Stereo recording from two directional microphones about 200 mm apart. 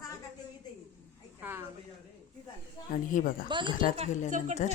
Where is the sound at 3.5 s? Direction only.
25° right (ahead or behind).